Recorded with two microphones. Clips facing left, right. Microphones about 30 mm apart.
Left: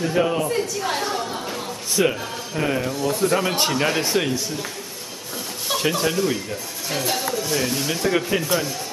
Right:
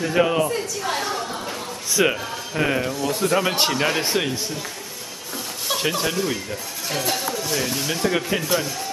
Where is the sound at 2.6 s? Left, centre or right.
Centre.